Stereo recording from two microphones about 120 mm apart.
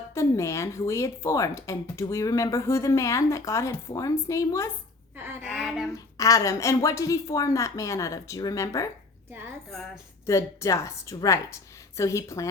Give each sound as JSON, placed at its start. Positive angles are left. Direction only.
{"t": 0.1, "sound": "speech", "side_deg": 25}
{"t": 5.1, "sound": "a sound", "side_deg": -20}
{"t": 5.4, "sound": "speech", "side_deg": -5}
{"t": 5.9, "sound": "speech", "side_deg": 30}
{"t": 9.6, "sound": "speech", "side_deg": 5}
{"t": 10.2, "sound": "speech", "side_deg": 25}